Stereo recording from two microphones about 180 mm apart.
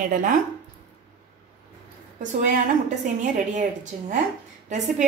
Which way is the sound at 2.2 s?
45° right (ahead or behind).